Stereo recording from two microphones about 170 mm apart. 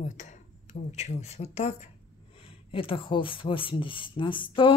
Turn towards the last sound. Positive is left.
turn(degrees=30)  # may be behind; listen again after turning